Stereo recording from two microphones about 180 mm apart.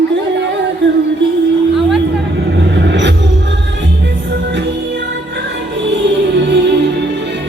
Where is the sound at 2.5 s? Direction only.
75° right (ahead or behind).